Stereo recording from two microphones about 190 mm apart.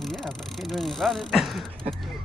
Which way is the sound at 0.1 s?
Centre (ahead or behind).